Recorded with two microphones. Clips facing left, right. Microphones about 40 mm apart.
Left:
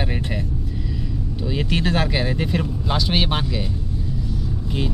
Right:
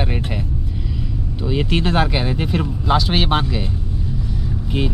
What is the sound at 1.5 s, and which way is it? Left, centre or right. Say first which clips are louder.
Speech: right 3 dB; centre.